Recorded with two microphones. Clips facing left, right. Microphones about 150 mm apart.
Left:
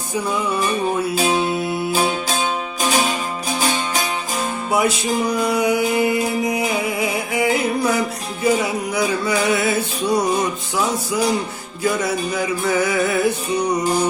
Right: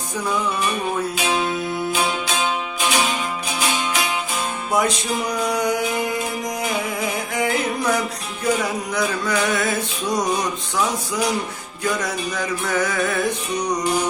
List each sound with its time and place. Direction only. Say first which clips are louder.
0.6 s music: left 3 dB; 35° left (ahead or behind)
4.7 s mantra: left 2 dB; 10° left (ahead or behind)
8.6 s music: left 2 dB; 10° left (ahead or behind)
13.8 s music: left 3 dB; 35° left (ahead or behind)